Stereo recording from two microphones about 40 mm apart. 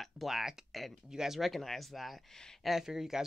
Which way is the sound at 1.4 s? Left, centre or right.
Centre.